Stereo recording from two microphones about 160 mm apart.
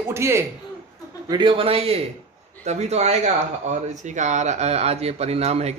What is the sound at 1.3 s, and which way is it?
Speech, 30° right (ahead or behind).